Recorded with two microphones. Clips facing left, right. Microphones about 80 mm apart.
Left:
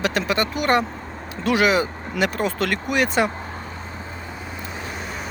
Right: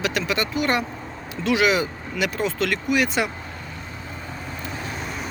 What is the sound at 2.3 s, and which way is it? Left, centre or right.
Speech, left.